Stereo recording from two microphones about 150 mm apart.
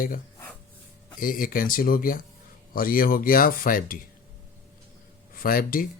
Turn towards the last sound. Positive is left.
turn(degrees=70)  # may be behind; listen again after turning